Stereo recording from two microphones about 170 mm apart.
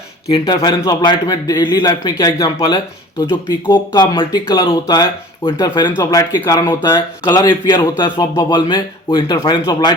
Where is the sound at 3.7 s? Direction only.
25° left (ahead or behind).